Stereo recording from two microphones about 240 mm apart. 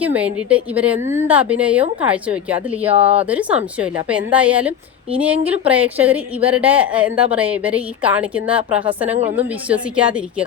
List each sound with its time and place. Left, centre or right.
0.0 s a woman's voice: centre
2.9 s speech: right
3.2 s a woman's voice: centre